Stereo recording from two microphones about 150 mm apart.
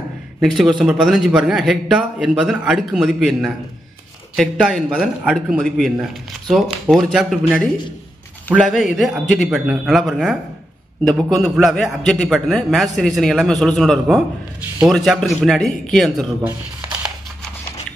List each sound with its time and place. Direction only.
0.4 s a man's voice: centre (ahead or behind)